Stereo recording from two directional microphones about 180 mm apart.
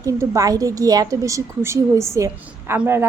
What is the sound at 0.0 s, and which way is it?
A woman's voice, 20° right (ahead or behind).